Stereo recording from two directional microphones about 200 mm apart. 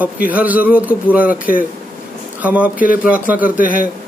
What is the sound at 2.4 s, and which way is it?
A man's voice, 5° right (ahead or behind).